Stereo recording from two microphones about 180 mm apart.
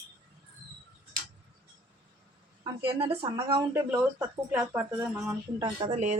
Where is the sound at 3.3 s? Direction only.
20° right (ahead or behind).